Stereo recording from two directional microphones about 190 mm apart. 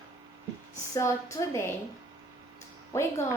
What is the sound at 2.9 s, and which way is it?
Speech, 15° left (ahead or behind).